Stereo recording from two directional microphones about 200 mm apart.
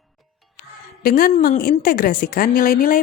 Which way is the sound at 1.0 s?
45° left (ahead or behind).